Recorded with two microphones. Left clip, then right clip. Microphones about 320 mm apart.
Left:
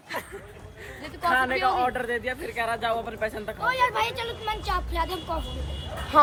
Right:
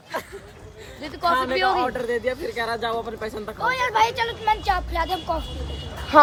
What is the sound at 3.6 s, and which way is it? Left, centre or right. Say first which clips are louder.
Speech: right 4 dB; right.